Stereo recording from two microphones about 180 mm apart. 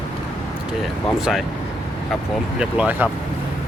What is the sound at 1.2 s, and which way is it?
Speech, centre (ahead or behind).